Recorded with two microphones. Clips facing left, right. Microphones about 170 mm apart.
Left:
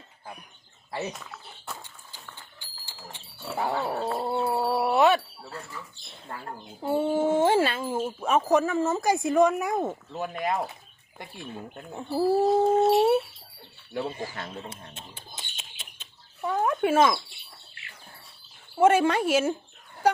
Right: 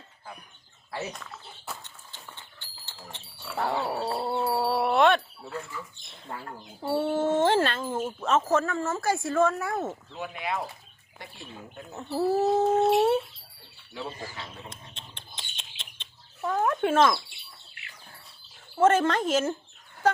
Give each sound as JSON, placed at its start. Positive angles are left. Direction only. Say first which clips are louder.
{"t": 1.8, "sound": "dog", "louder": "left 1 dB", "side_deg": 10}
{"t": 4.2, "sound": "a sound", "louder": "even", "side_deg": 0}
{"t": 6.3, "sound": "speech", "louder": "right 1 dB", "side_deg": -5}
{"t": 6.8, "sound": "speech", "louder": "left 2 dB", "side_deg": 10}
{"t": 10.1, "sound": "speech", "louder": "left 4 dB", "side_deg": 45}
{"t": 11.9, "sound": "speech", "louder": "left 2 dB", "side_deg": 10}
{"t": 13.9, "sound": "speech", "louder": "left 5 dB", "side_deg": 55}
{"t": 14.9, "sound": "rodents", "louder": "left 3 dB", "side_deg": 5}
{"t": 17.8, "sound": "a sound", "louder": "even", "side_deg": 30}
{"t": 18.8, "sound": "speech", "louder": "left 1 dB", "side_deg": 10}